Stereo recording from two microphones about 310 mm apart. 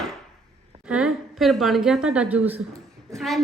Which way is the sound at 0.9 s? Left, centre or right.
Centre.